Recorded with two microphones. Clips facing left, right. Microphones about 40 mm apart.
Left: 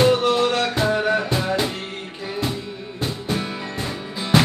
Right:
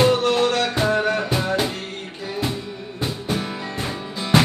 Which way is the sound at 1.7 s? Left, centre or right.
Centre.